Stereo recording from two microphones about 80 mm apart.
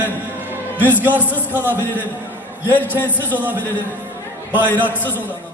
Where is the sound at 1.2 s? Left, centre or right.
Left.